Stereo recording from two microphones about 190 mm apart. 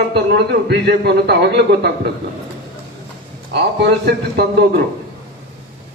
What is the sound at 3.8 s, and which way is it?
Speech, 60° right (ahead or behind).